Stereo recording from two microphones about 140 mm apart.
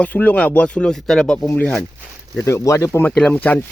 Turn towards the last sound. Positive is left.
turn(degrees=10)  # may be behind; listen again after turning